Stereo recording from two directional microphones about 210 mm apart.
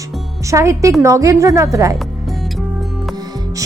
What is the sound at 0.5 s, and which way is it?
Speech, 15° right (ahead or behind).